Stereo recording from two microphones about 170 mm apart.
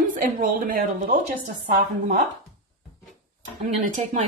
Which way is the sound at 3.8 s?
50° right (ahead or behind).